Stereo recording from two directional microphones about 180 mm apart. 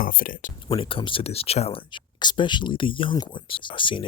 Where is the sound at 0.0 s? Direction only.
50° left (ahead or behind).